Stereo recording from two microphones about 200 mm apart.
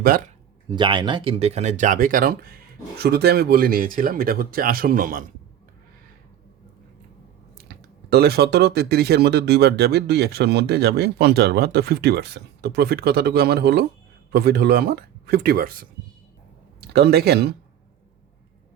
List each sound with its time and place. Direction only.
0.7 s speech: 25° right (ahead or behind); by 5.2 s 45° right (ahead or behind)
8.1 s speech: 55° right (ahead or behind)
16.9 s speech: 55° right (ahead or behind)